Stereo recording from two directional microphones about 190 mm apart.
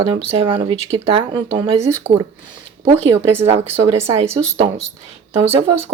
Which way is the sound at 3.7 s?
15° right (ahead or behind).